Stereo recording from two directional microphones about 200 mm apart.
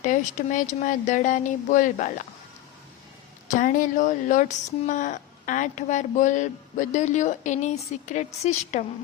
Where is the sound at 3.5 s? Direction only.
40° left (ahead or behind).